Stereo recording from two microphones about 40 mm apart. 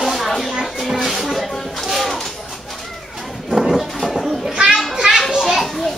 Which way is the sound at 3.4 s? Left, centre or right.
Centre.